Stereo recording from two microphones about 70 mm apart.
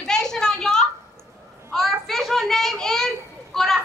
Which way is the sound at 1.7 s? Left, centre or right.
Centre.